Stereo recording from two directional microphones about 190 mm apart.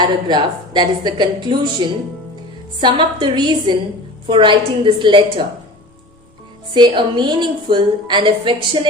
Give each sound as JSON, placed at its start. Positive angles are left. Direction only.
{"t": 0.0, "sound": "a woman's voice", "side_deg": -25}
{"t": 6.7, "sound": "a woman's voice", "side_deg": -25}